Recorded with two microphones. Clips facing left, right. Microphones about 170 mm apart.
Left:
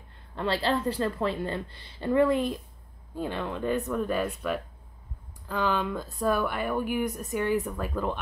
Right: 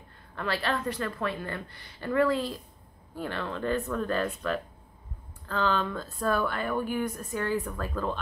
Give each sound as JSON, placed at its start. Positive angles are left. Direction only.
{"t": 0.4, "sound": "a woman's voice", "side_deg": 25}